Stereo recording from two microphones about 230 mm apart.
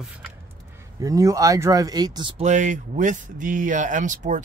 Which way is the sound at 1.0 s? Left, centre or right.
Centre.